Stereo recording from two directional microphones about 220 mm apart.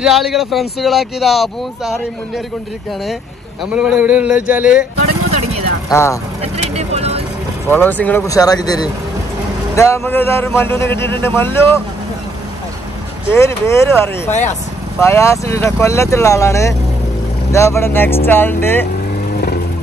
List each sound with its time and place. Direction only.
0.0 s speech: centre (ahead or behind)
3.7 s a sound: 5° right (ahead or behind)
5.9 s speech: 15° left (ahead or behind)
6.4 s speech: 30° right (ahead or behind)
7.6 s a man's voice: 10° left (ahead or behind)
13.3 s a man's voice: 10° left (ahead or behind)